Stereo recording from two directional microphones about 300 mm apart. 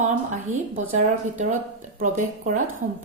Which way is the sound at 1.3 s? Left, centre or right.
Right.